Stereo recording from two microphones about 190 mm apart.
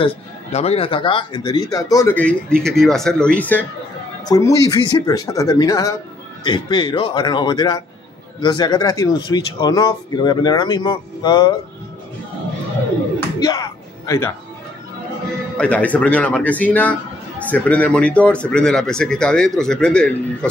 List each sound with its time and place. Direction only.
0.0 s speech: 35° left (ahead or behind); by 2.1 s 15° left (ahead or behind)
2.1 s speech: 5° left (ahead or behind); by 11.5 s 20° left (ahead or behind)
13.4 s speech: 20° left (ahead or behind)
15.5 s speech: 5° left (ahead or behind)